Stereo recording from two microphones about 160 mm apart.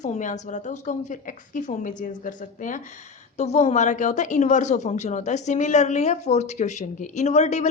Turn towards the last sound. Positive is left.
turn(degrees=45)  # may be behind; listen again after turning